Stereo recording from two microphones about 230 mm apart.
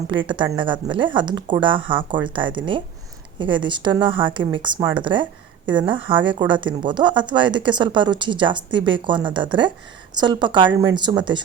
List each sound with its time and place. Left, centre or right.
0.1 s speech: right